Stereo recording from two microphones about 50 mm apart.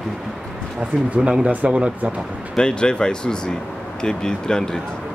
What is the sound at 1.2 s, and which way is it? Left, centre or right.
Speech, centre.